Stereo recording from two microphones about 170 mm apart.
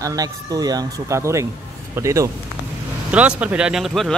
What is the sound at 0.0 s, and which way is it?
Speech, 20° right (ahead or behind).